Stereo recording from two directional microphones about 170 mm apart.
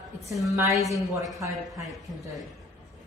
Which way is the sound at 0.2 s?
20° right (ahead or behind).